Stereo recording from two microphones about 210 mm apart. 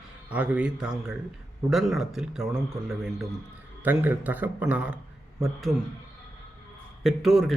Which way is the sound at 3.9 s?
10° right (ahead or behind).